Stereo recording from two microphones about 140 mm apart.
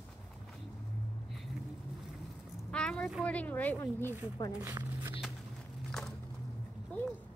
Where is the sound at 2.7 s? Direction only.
5° left (ahead or behind).